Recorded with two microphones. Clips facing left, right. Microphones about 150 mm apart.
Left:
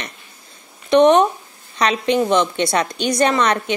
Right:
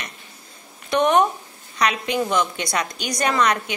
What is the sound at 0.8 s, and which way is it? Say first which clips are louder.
Speech: left 6 dB; 20° left (ahead or behind).